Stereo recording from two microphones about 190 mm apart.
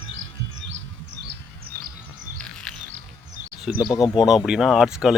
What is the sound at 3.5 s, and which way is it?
Speech, centre (ahead or behind).